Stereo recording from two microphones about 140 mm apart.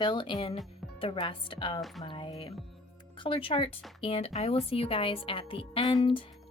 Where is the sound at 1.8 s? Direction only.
Centre (ahead or behind).